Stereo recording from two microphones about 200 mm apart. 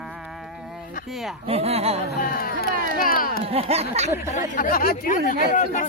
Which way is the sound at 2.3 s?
50° left (ahead or behind).